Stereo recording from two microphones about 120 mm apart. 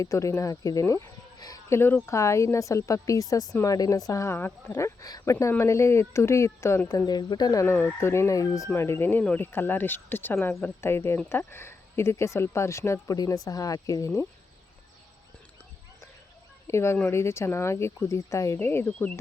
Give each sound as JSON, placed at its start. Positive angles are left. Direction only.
{"t": 0.0, "sound": "speech", "side_deg": 25}
{"t": 4.8, "sound": "speech", "side_deg": 30}
{"t": 16.6, "sound": "speech", "side_deg": 20}